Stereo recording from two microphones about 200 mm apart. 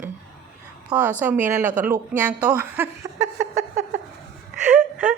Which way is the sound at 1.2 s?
10° right (ahead or behind).